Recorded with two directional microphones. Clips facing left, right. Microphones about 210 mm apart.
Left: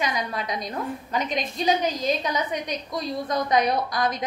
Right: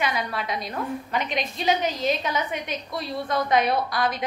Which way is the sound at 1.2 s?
45° left (ahead or behind).